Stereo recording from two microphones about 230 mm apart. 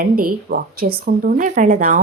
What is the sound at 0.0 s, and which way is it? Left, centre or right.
Speech, right.